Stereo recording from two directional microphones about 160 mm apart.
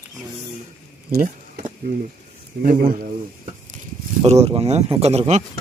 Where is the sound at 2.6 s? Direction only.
60° right (ahead or behind).